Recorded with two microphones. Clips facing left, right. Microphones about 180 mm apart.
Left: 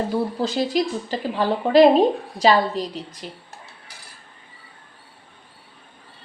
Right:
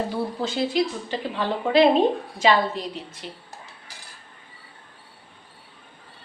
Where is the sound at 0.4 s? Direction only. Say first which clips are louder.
Right 2 dB; 40° left (ahead or behind).